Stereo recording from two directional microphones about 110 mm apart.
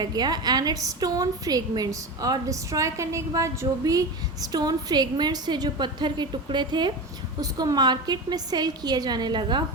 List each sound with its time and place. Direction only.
0.0 s a woman's voice: 40° right (ahead or behind)